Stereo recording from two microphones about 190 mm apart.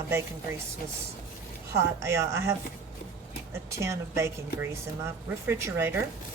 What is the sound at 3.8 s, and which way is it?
Speech, 15° right (ahead or behind).